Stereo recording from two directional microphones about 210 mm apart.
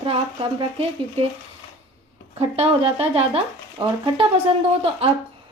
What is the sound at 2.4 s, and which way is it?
A woman's voice, 30° right (ahead or behind).